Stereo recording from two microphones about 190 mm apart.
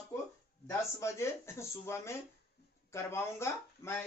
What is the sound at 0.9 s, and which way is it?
Speech, 15° left (ahead or behind).